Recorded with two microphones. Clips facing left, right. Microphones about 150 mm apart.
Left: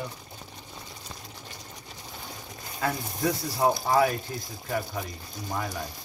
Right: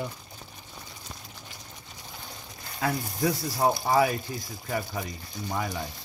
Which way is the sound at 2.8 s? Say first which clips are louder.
Right 1 dB; centre (ahead or behind).